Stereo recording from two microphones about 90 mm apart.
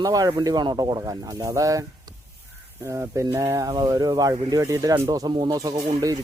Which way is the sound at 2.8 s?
35° right (ahead or behind).